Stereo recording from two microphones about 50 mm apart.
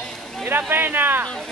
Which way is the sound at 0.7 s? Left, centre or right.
Right.